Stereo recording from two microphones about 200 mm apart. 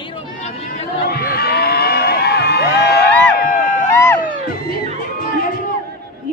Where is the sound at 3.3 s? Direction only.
40° left (ahead or behind).